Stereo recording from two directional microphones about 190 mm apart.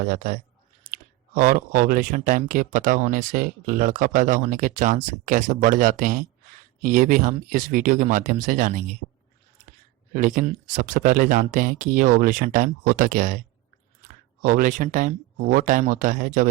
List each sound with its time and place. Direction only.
0.0 s speech: 45° right (ahead or behind)
0.9 s chewing: 45° right (ahead or behind)
1.4 s speech: 45° right (ahead or behind)
10.1 s speech: 45° right (ahead or behind)
14.4 s speech: 45° right (ahead or behind)